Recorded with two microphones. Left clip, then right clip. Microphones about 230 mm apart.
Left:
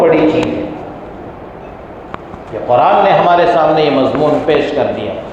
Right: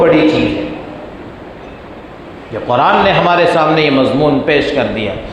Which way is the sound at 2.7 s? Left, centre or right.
Right.